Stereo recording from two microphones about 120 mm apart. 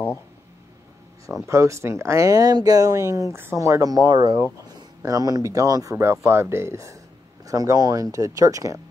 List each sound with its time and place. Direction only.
1.4 s speech: 25° right (ahead or behind)